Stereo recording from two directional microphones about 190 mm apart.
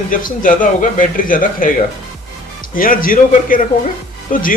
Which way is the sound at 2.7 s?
45° left (ahead or behind).